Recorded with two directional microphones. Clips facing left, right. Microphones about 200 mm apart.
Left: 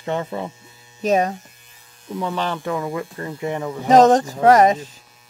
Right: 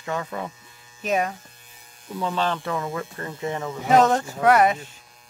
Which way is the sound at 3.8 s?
40° left (ahead or behind).